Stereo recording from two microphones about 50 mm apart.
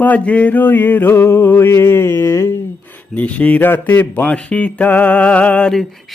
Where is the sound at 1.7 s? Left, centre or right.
Left.